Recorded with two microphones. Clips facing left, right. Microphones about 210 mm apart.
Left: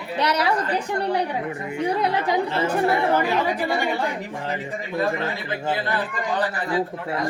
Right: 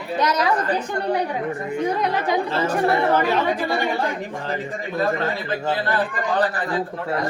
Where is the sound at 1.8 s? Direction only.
30° left (ahead or behind).